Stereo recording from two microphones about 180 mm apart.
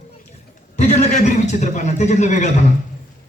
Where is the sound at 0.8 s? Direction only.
40° left (ahead or behind).